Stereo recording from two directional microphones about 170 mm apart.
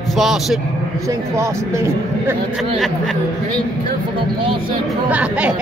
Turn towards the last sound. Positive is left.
turn(degrees=-5)  # may be behind; listen again after turning